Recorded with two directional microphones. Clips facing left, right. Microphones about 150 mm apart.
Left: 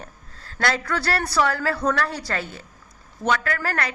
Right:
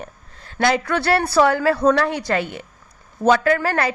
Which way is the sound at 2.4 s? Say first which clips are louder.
Right 6 dB; 90° right.